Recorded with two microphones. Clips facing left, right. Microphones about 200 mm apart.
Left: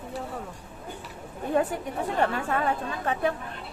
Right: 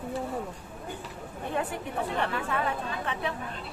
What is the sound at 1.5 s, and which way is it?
Speech, 45° left (ahead or behind).